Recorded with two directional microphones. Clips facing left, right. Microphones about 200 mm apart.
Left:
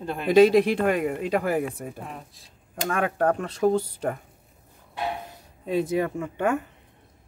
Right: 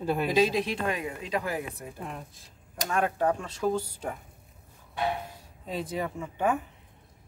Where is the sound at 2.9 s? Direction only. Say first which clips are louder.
Left 3 dB; 55° left (ahead or behind).